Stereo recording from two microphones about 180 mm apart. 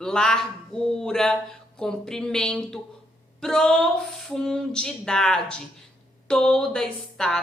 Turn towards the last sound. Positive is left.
turn(degrees=5)  # may be behind; listen again after turning